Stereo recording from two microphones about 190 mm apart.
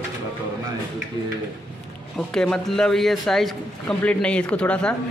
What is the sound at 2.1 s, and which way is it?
A man's voice, 5° left (ahead or behind).